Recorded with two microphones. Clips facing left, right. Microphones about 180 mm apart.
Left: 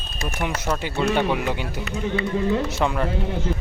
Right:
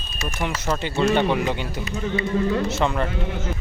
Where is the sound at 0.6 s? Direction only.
5° left (ahead or behind).